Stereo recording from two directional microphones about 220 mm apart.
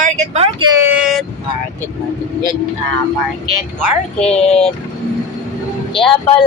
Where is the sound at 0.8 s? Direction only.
5° right (ahead or behind).